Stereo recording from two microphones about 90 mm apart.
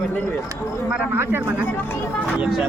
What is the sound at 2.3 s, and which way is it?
Speech, 15° right (ahead or behind).